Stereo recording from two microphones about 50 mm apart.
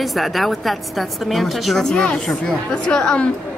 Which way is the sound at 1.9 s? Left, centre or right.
Centre.